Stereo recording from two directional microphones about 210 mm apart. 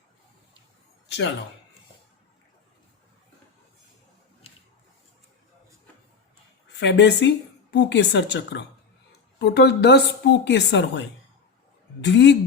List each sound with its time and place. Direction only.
4.4 s a sound: 30° left (ahead or behind)
6.7 s a woman's voice: 55° left (ahead or behind)
12.0 s a woman's voice: 55° left (ahead or behind)